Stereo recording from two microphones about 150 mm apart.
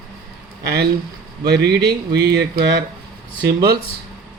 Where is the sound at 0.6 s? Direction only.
90° right.